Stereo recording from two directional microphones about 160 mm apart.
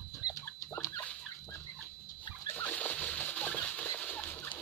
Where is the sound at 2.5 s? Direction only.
10° left (ahead or behind).